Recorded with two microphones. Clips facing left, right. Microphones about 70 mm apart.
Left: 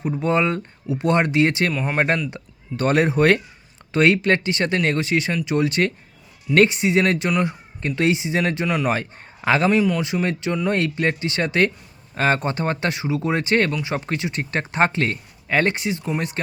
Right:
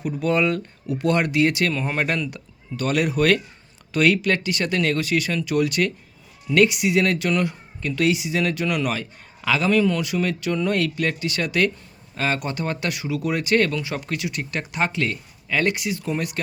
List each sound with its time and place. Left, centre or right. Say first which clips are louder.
0.0 s speech: left 1 dB; left
1.7 s a man's voice: left 1 dB; centre
2.3 s speech: left 2 dB; left
7.3 s a man's voice: left 1 dB; centre
7.8 s speech: left 1 dB; left
8.9 s a man's voice: left 4 dB; left
9.7 s a man's voice: even; centre
10.0 s speech: left 1 dB; left